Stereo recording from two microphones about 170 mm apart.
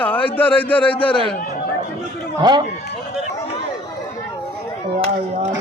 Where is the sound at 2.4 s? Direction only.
25° right (ahead or behind).